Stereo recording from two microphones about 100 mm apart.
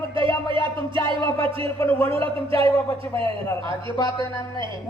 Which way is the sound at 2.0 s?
65° right (ahead or behind).